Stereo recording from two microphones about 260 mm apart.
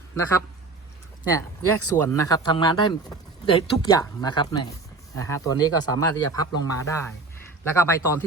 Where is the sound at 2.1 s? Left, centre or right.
Centre.